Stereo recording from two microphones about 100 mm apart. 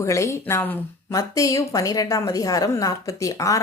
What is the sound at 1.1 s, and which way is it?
A woman's voice, 35° left (ahead or behind).